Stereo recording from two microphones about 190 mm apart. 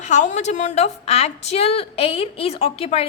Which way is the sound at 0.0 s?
40° left (ahead or behind).